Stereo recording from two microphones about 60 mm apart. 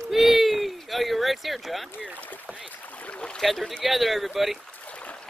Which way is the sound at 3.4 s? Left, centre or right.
Centre.